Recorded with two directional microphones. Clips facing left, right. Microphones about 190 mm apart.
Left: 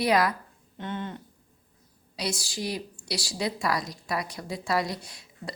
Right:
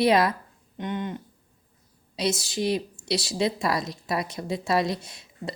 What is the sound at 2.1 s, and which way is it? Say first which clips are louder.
A woman's voice: right 6 dB; 20° right (ahead or behind).